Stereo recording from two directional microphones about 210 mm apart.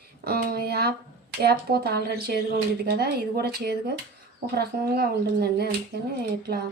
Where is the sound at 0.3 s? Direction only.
45° right (ahead or behind).